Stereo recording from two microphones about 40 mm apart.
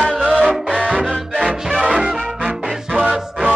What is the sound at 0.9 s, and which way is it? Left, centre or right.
Music, right.